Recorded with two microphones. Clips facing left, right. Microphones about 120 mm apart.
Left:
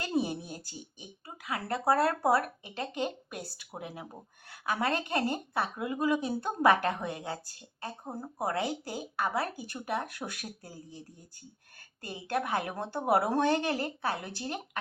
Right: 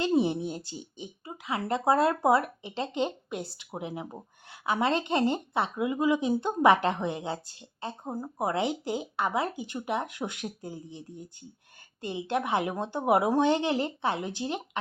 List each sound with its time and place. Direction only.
0.0 s speech: 25° right (ahead or behind)
12.0 s speech: 20° right (ahead or behind)